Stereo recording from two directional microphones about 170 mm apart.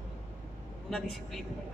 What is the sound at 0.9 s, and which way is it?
Speech, centre (ahead or behind).